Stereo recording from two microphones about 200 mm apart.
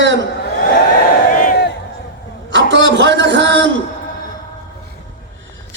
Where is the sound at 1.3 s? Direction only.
40° left (ahead or behind).